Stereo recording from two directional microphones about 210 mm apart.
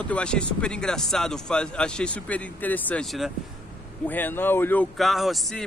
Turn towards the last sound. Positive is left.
turn(degrees=0)  # may be behind; listen again after turning